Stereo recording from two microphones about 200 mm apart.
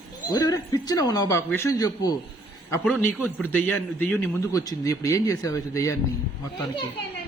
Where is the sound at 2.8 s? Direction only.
5° left (ahead or behind).